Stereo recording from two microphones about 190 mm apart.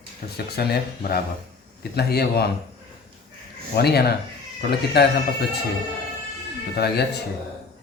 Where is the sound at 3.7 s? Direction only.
55° left (ahead or behind).